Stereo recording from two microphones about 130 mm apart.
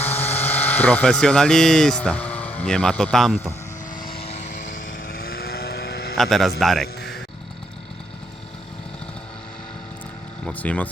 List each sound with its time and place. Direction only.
0.2 s speech: 15° left (ahead or behind)
4.2 s vehicle: 55° left (ahead or behind); by 5.1 s 85° left
6.1 s a man's voice: centre (ahead or behind)
10.4 s speech: 10° left (ahead or behind)